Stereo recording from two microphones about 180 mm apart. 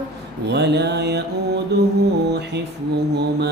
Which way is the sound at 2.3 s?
70° right (ahead or behind).